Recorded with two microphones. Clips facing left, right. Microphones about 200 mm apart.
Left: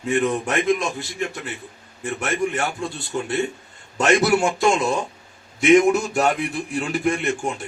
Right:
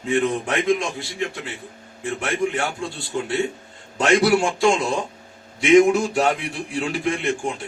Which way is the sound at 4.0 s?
45° left (ahead or behind).